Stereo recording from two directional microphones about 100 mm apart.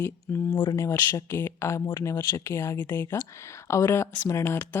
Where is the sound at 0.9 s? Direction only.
30° left (ahead or behind).